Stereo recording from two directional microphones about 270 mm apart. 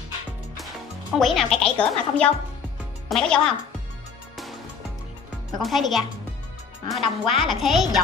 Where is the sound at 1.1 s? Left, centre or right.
Centre.